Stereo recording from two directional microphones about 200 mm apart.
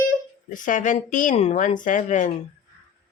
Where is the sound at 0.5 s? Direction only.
40° left (ahead or behind).